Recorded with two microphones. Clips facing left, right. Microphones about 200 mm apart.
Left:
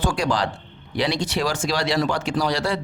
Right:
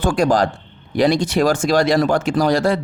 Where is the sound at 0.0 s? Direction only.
50° right (ahead or behind).